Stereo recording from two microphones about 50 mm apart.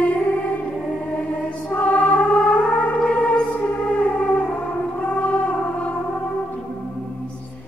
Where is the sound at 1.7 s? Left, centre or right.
Left.